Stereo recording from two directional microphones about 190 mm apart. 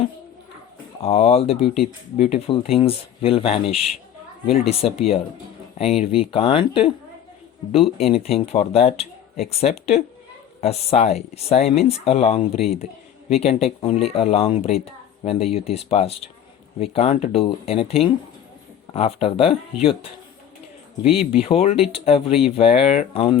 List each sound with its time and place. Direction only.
1.0 s speech: 35° left (ahead or behind)
8.0 s speech: 30° left (ahead or behind)